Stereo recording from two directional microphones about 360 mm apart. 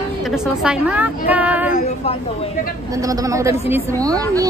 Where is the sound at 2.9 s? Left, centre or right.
Centre.